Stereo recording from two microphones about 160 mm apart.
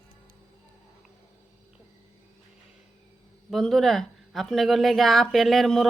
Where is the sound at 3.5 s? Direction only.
Centre (ahead or behind).